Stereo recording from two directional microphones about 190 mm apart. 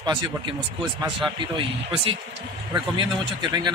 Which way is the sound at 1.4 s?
25° right (ahead or behind).